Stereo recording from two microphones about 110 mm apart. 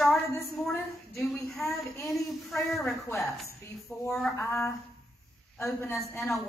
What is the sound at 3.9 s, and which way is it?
Speech, 15° left (ahead or behind).